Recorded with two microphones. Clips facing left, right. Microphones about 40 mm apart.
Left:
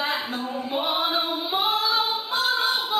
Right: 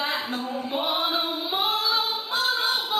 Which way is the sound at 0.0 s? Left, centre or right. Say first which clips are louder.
Left 1 dB; centre.